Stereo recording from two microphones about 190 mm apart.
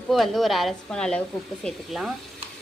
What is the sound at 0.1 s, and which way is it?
A woman's voice, centre (ahead or behind).